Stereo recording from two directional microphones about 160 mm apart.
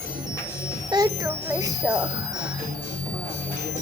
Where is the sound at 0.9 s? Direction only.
25° right (ahead or behind).